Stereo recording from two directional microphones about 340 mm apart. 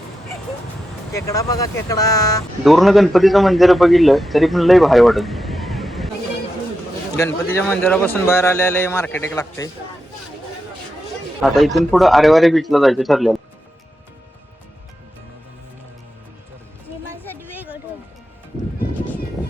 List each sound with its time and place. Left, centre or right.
1.1 s a man's voice: centre
7.2 s a man's voice: centre
11.4 s a man's voice: centre